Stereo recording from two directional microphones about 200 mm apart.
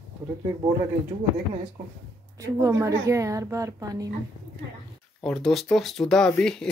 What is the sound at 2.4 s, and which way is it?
A woman's voice, 15° right (ahead or behind).